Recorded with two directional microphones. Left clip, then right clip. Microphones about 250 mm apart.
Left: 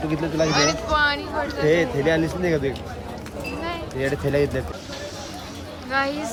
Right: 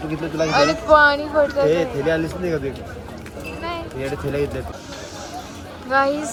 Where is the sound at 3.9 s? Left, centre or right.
Left.